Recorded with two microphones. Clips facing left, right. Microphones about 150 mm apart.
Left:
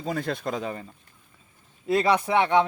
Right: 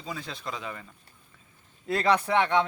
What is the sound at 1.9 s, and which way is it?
Speech, 10° left (ahead or behind).